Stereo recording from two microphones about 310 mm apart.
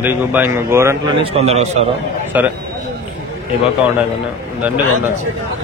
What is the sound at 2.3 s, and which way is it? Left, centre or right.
Speech, centre.